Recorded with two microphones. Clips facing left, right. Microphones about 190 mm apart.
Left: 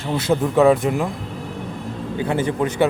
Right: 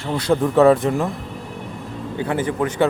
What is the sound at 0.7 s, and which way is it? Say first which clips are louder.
Speech: right 1 dB; 15° left (ahead or behind).